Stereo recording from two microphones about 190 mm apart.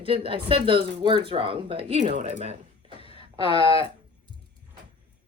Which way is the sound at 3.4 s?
30° left (ahead or behind).